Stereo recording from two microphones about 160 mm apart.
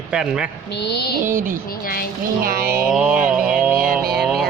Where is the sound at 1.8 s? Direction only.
65° left (ahead or behind).